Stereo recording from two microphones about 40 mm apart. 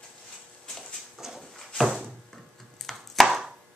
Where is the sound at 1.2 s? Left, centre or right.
Centre.